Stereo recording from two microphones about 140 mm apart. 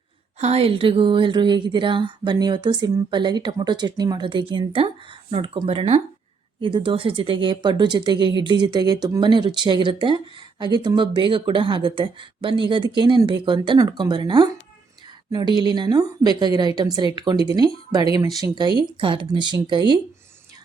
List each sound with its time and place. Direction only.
0.3 s speech: 50° right (ahead or behind)